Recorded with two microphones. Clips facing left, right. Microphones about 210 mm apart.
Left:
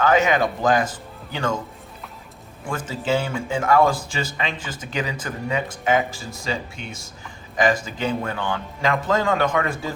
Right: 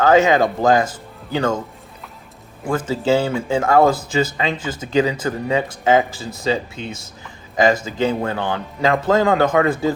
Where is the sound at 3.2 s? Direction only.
35° right (ahead or behind).